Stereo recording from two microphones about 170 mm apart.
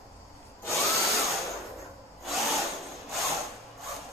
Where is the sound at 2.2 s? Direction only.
Centre (ahead or behind).